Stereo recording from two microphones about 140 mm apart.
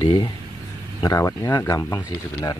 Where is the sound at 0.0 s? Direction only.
35° left (ahead or behind).